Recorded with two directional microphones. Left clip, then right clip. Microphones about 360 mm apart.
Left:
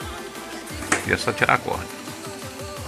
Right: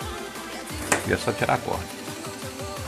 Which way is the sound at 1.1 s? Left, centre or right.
Centre.